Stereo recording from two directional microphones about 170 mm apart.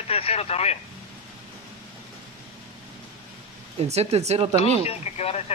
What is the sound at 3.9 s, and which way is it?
Speech, 40° right (ahead or behind).